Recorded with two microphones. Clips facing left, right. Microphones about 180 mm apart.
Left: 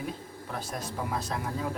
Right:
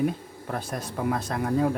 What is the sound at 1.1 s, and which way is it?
Speech, 55° right (ahead or behind).